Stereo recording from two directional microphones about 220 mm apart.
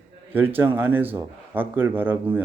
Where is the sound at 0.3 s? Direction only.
10° right (ahead or behind).